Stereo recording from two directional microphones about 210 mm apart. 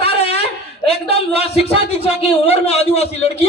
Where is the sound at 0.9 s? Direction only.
30° left (ahead or behind).